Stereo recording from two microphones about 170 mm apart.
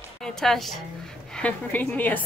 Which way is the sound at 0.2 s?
Centre (ahead or behind).